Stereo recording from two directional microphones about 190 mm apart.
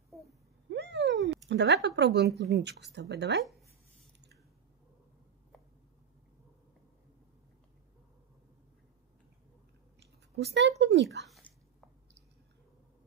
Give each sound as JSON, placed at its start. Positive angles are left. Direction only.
{"t": 0.7, "sound": "a sound", "side_deg": -65}
{"t": 1.5, "sound": "speech", "side_deg": -65}
{"t": 10.3, "sound": "speech", "side_deg": -60}